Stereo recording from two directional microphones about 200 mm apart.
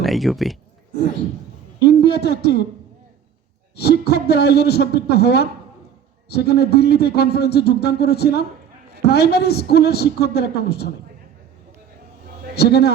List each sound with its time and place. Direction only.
0.0 s speech: centre (ahead or behind)
1.8 s a man's voice: 55° left (ahead or behind)
3.8 s a man's voice: 55° left (ahead or behind)
12.5 s a man's voice: 55° left (ahead or behind)